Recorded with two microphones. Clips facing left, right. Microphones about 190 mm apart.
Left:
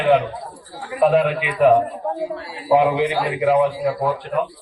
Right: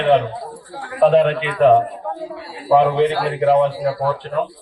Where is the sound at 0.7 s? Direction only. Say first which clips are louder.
Right 2 dB; 60° right (ahead or behind).